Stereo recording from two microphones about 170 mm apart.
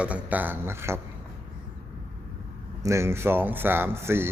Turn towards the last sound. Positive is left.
turn(degrees=-15)  # may be behind; listen again after turning